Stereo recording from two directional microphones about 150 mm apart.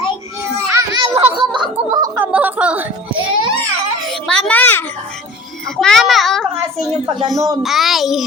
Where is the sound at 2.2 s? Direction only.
10° right (ahead or behind).